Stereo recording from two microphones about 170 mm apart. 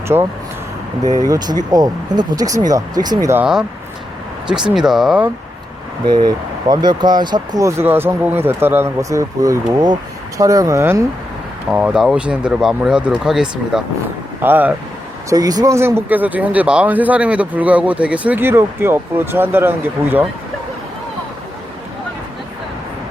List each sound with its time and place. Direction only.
0.1 s speech: 15° right (ahead or behind)
1.7 s speech: 20° right (ahead or behind)
3.4 s speech: 5° right (ahead or behind)
6.1 s speech: 25° right (ahead or behind)
11.7 s speech: 5° right (ahead or behind)
15.3 s speech: 20° right (ahead or behind)